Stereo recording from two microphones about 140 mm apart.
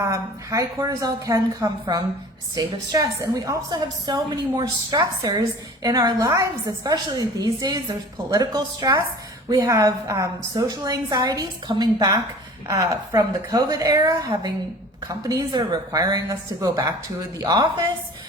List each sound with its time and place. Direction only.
0.0 s a woman's voice: 25° right (ahead or behind)